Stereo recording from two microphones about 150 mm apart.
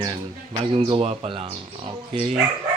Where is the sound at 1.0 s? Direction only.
40° right (ahead or behind).